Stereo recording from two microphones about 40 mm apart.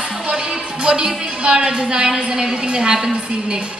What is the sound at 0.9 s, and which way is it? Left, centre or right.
A woman's voice, centre.